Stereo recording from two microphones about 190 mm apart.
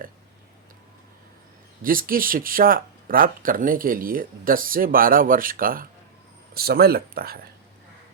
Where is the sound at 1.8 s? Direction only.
50° right (ahead or behind).